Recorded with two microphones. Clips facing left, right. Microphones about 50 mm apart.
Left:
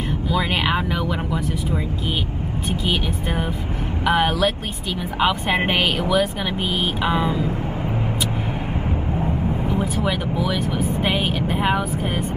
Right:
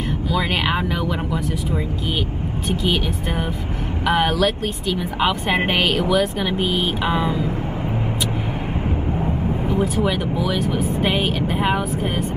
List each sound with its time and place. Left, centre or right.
4.0 s speech: centre
9.7 s speech: left
10.0 s speech: centre